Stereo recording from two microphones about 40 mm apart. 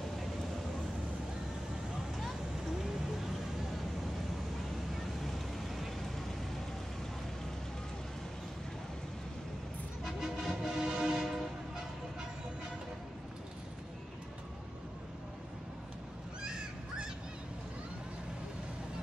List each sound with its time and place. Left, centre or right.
5.2 s vehicle: centre
10.2 s music: centre
11.1 s train: centre
16.4 s a sound: centre